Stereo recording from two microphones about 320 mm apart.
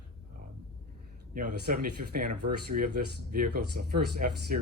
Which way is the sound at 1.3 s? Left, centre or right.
Right.